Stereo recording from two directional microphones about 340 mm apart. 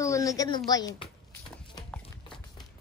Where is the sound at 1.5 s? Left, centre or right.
Centre.